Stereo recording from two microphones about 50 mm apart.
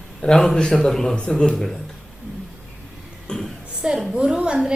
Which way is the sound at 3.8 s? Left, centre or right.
Right.